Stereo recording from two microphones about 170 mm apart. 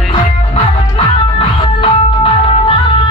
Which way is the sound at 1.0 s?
35° left (ahead or behind).